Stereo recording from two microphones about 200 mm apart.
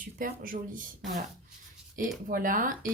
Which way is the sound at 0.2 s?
45° right (ahead or behind).